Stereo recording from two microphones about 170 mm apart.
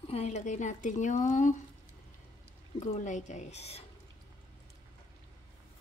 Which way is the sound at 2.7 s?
40° left (ahead or behind).